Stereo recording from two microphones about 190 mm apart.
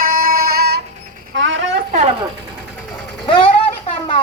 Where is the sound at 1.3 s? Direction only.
75° right (ahead or behind).